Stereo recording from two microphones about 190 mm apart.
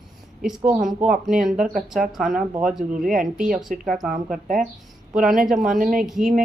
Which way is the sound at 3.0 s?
45° right (ahead or behind).